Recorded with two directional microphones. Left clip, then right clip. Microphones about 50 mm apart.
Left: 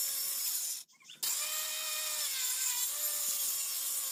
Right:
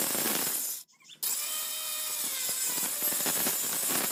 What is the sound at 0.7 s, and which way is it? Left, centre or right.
Drill, right.